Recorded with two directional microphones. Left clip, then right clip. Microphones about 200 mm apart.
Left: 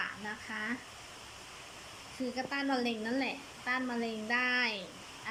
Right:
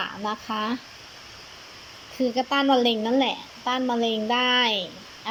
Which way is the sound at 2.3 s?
25° right (ahead or behind).